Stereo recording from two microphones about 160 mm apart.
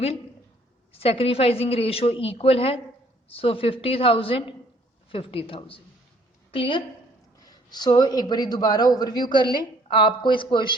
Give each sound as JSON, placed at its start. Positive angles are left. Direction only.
{"t": 0.9, "sound": "a woman's voice", "side_deg": 35}